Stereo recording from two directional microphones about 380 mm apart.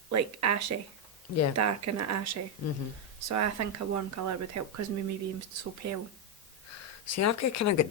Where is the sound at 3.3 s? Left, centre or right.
Right.